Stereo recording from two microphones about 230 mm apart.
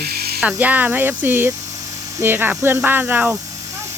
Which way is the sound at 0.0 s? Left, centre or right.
Right.